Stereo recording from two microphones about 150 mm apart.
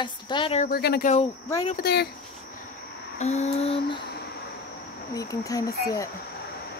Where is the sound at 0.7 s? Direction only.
90° left.